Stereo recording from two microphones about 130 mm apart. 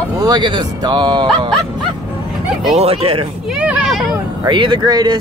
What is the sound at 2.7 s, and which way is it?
Speech, 50° right (ahead or behind).